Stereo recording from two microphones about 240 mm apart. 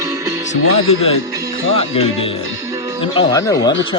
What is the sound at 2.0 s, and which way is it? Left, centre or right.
Speech, left.